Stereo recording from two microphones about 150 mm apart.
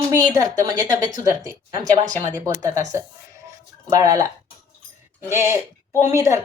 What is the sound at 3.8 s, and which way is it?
Speech, 20° right (ahead or behind).